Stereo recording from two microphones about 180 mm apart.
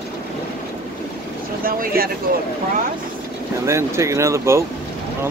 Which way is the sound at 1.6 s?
55° right (ahead or behind).